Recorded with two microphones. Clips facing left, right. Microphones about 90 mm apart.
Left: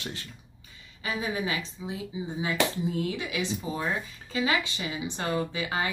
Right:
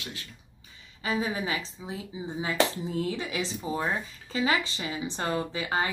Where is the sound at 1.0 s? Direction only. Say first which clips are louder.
Right 1 dB; 35° right (ahead or behind).